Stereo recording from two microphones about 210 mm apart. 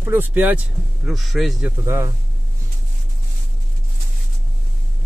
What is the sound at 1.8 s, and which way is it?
Speech, 15° right (ahead or behind).